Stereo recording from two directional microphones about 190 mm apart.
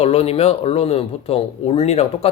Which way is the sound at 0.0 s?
30° left (ahead or behind).